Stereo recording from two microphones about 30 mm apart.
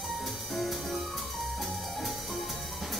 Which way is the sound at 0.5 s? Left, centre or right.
Centre.